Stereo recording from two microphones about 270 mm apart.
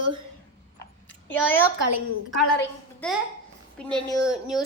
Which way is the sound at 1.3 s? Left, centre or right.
Centre.